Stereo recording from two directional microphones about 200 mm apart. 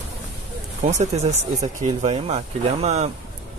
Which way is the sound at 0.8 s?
35° right (ahead or behind).